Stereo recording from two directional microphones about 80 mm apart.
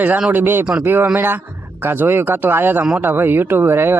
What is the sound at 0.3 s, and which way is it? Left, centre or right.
Speech, right.